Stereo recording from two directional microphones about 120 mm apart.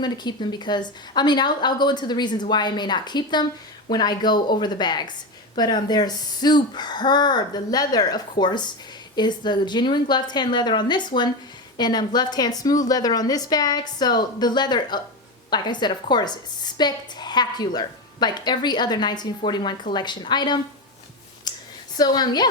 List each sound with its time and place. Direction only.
0.0 s speech: 35° left (ahead or behind)
21.5 s a sound: 35° left (ahead or behind)
21.9 s speech: 35° left (ahead or behind)